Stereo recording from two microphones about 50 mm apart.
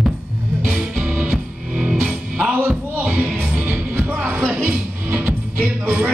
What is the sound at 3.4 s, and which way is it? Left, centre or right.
Music, right.